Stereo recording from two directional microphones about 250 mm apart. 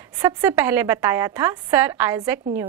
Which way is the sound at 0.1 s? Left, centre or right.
Centre.